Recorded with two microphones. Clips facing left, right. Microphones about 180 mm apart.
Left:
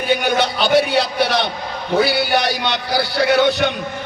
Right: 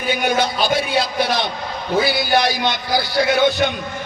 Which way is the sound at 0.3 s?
70° left (ahead or behind).